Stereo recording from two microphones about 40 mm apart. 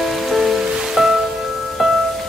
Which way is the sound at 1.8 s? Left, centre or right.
Centre.